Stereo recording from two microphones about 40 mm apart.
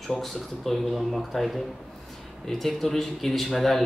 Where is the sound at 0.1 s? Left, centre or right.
Centre.